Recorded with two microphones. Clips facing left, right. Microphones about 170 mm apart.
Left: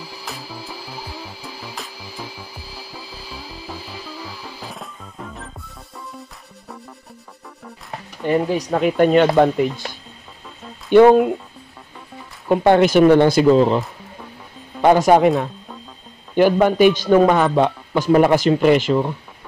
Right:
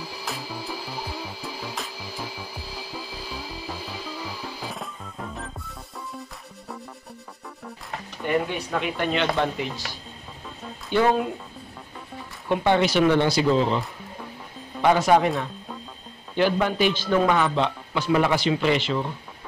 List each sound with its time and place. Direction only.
0.2 s music: centre (ahead or behind)
4.6 s music: centre (ahead or behind)
8.3 s a man's voice: 35° left (ahead or behind); by 11.2 s 55° left (ahead or behind)
12.4 s a man's voice: 50° left (ahead or behind)
14.8 s a man's voice: 45° left (ahead or behind)
16.3 s a man's voice: 50° left (ahead or behind)